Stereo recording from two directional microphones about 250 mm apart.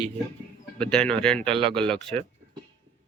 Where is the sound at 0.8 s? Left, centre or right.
Centre.